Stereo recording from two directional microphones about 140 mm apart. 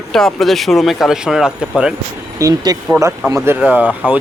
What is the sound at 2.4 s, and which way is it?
Speech, 25° right (ahead or behind).